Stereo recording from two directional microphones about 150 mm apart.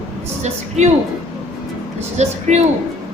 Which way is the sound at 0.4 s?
50° right (ahead or behind).